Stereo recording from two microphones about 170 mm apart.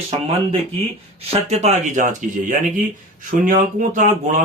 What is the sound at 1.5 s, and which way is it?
Speech, 40° right (ahead or behind).